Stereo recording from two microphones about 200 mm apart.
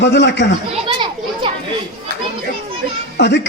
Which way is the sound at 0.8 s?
25° right (ahead or behind).